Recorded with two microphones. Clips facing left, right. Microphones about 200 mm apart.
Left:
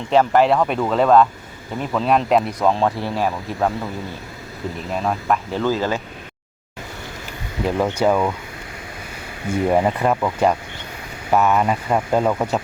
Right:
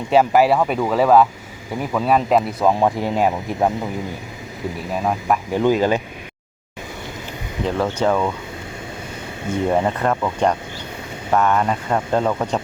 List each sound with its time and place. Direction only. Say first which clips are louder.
0.1 s speech: right 1 dB; 10° right (ahead or behind)
5.0 s speech: right 1 dB; 15° right (ahead or behind)
7.6 s speech: left 1 dB; 10° left (ahead or behind)
9.6 s speech: left 1 dB; 10° left (ahead or behind)